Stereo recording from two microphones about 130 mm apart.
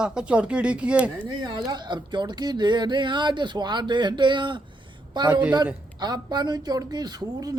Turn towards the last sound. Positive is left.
turn(degrees=-30)  # may be behind; listen again after turning